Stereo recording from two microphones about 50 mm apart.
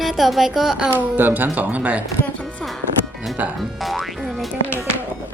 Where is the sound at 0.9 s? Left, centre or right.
Right.